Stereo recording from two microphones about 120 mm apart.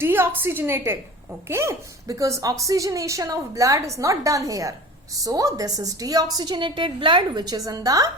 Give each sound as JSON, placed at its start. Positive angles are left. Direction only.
{"t": 0.0, "sound": "a woman's voice", "side_deg": -20}